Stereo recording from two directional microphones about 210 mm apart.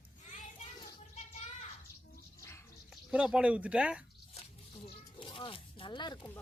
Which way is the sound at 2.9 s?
5° right (ahead or behind).